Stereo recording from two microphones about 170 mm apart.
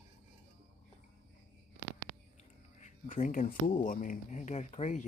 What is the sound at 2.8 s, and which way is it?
Speech, 50° left (ahead or behind).